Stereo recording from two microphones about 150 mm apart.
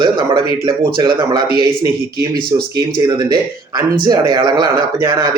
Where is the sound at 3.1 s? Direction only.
25° right (ahead or behind).